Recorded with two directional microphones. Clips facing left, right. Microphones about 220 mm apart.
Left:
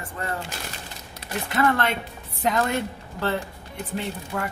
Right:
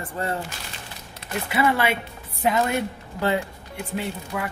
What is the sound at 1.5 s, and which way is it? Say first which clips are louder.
A woman's voice: right 1 dB; 10° right (ahead or behind).